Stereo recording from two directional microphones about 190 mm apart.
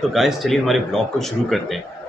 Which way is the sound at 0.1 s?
Centre (ahead or behind).